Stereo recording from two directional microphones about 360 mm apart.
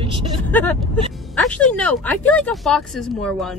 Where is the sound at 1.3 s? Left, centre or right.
Centre.